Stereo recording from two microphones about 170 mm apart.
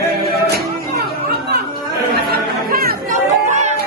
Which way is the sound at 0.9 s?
65° right (ahead or behind).